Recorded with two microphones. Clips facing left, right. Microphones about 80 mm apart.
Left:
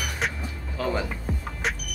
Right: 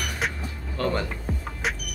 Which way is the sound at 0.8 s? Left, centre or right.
Centre.